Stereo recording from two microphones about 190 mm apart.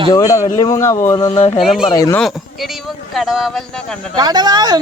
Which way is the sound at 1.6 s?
Centre (ahead or behind).